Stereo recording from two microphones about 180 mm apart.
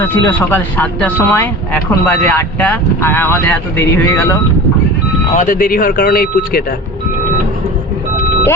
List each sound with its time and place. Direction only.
0.0 s speech: 10° left (ahead or behind)
5.4 s speech: 50° left (ahead or behind)